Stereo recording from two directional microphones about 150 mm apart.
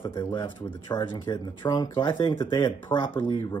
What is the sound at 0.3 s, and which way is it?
Speech, 30° left (ahead or behind).